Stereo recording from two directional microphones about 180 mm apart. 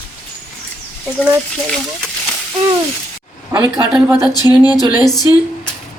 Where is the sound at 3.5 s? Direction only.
20° right (ahead or behind).